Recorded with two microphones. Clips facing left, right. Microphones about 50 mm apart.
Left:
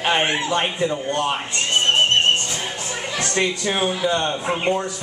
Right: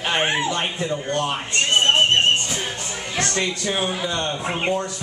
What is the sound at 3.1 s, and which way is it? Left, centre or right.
Speech, centre.